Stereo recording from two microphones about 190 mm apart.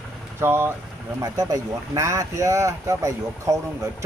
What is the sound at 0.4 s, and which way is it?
Speech, 10° right (ahead or behind).